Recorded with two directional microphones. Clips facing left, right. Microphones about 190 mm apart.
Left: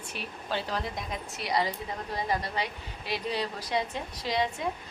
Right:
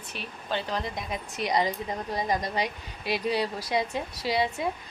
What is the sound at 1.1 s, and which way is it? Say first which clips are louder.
A woman's voice: right 4 dB; 20° right (ahead or behind).